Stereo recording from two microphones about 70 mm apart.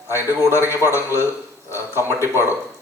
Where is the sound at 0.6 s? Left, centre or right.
Right.